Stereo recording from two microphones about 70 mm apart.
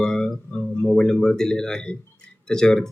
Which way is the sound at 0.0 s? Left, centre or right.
Centre.